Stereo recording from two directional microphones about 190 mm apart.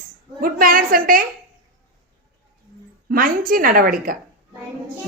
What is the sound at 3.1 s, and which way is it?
A woman's voice, 50° right (ahead or behind).